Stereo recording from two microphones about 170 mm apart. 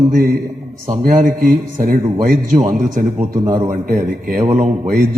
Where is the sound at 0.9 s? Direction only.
50° right (ahead or behind).